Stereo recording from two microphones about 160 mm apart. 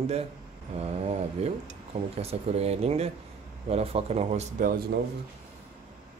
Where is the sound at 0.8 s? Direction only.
40° right (ahead or behind).